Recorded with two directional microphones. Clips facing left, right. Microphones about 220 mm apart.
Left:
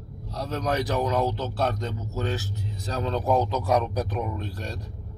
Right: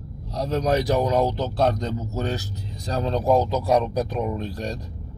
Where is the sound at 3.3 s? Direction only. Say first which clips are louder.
Right 2 dB; 10° right (ahead or behind).